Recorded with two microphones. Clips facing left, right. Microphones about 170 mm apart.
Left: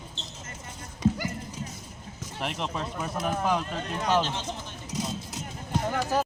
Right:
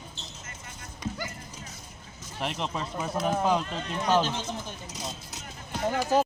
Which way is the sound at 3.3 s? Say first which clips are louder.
Right 2 dB; 25° right (ahead or behind).